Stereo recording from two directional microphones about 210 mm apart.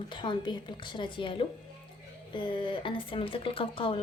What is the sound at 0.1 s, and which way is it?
A woman's voice, 20° left (ahead or behind).